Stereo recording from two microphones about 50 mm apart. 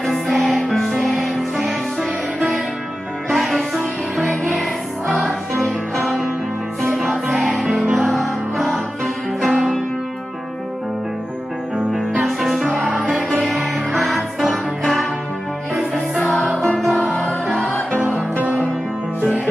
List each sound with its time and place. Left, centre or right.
0.0 s music: centre
2.0 s music: centre
6.8 s music: centre
11.9 s music: centre
16.2 s music: centre
17.0 s music: left